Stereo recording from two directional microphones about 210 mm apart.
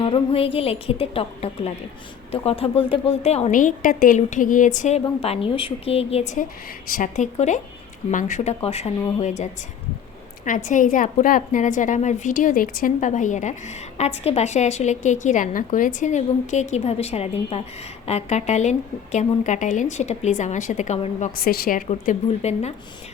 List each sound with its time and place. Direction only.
0.0 s a woman's voice: 25° left (ahead or behind)
10.4 s a woman's voice: 40° left (ahead or behind)
21.3 s a woman's voice: 45° left (ahead or behind)